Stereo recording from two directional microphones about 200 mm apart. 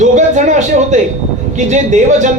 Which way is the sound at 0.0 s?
35° right (ahead or behind).